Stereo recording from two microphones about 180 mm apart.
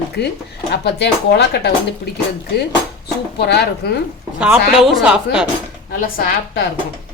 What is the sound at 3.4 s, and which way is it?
Speech, 65° left (ahead or behind).